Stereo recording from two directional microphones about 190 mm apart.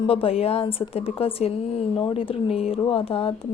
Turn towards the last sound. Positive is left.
turn(degrees=30)  # may be behind; listen again after turning